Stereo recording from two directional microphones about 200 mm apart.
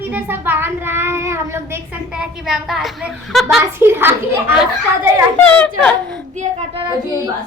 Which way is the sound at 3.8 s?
10° right (ahead or behind).